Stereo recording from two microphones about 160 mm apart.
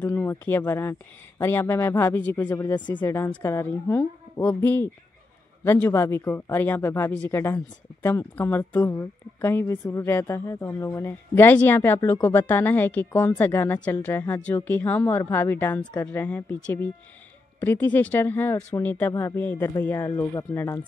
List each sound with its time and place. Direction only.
0.0 s speech: 15° left (ahead or behind)